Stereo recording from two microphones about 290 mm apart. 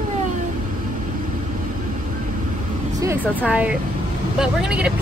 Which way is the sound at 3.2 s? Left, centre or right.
Centre.